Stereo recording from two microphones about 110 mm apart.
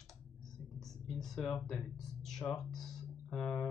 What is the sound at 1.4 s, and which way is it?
Speech, 5° left (ahead or behind).